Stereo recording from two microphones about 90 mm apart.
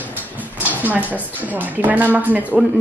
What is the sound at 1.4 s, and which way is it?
Speech, 20° right (ahead or behind).